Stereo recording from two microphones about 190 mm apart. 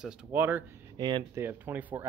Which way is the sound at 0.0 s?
5° right (ahead or behind).